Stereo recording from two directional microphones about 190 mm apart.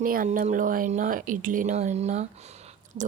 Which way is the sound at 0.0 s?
45° right (ahead or behind).